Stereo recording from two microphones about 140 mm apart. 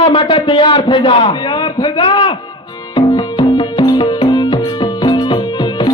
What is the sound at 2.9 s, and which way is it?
Music, 30° left (ahead or behind).